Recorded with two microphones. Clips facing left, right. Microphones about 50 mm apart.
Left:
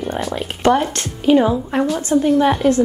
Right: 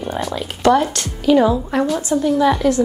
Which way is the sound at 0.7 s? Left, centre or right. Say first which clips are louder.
Right 1 dB; left.